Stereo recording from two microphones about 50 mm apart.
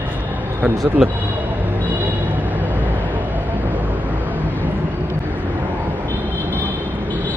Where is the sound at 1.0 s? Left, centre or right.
Centre.